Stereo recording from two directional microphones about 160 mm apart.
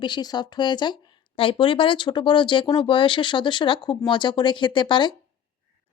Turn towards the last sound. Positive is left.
turn(degrees=30)  # may be behind; listen again after turning